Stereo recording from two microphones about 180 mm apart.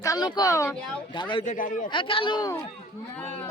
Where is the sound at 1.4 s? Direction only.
45° left (ahead or behind).